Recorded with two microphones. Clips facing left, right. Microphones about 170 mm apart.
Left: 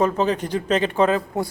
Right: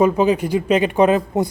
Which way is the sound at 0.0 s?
10° right (ahead or behind).